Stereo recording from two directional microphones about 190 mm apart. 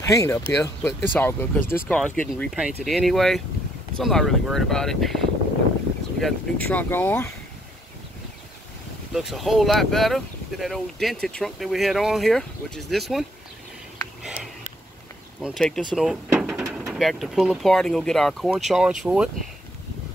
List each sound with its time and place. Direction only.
0.0 s speech: 15° left (ahead or behind)
9.1 s speech: centre (ahead or behind)
13.9 s a sound: centre (ahead or behind)
15.4 s speech: centre (ahead or behind)
16.3 s a sound: 5° right (ahead or behind)
16.9 s speech: centre (ahead or behind)